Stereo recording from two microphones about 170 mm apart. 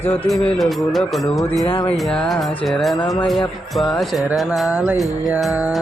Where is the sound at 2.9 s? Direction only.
20° left (ahead or behind).